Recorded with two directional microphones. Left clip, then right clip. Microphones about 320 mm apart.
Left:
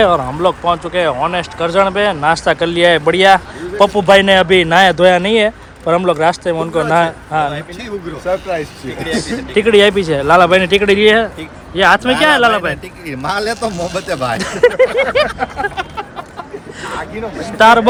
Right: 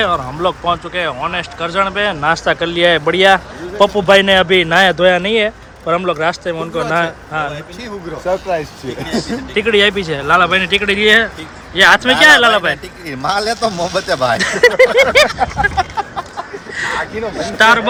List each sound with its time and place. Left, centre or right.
0.0 s speech: centre
8.3 s speech: right
9.6 s speech: centre
13.7 s speech: centre
14.3 s speech: centre
15.7 s a sound: centre
17.4 s speech: centre